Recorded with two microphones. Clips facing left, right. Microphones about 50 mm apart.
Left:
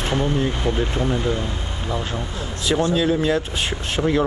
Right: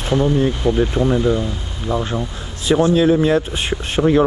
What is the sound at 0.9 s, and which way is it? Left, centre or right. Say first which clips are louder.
Speech: right 6 dB; right.